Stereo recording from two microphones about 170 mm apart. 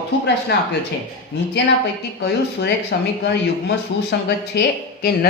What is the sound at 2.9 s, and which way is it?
Speech, 70° left (ahead or behind).